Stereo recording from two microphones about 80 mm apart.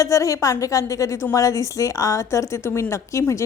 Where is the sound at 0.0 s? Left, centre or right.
Left.